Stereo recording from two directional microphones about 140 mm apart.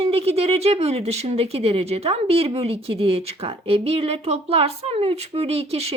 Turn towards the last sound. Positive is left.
turn(degrees=-45)  # may be behind; listen again after turning